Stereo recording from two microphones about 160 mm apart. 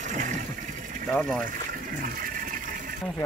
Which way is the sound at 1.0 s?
5° left (ahead or behind).